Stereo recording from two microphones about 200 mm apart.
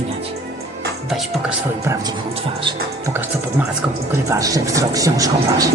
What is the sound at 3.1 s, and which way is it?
Speech, 10° right (ahead or behind).